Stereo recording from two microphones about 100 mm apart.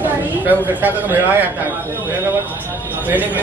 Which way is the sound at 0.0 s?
20° right (ahead or behind).